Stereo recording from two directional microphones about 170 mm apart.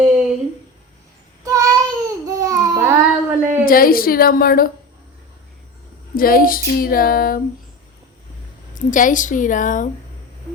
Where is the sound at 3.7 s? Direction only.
60° left (ahead or behind).